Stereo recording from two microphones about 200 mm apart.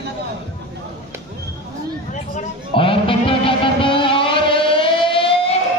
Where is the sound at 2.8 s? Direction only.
25° left (ahead or behind).